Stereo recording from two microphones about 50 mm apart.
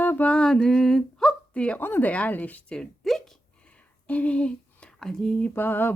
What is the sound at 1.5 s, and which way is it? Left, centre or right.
Speech, left.